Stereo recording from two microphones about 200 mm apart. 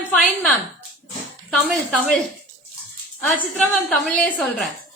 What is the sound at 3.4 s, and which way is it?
A woman's voice, 5° left (ahead or behind).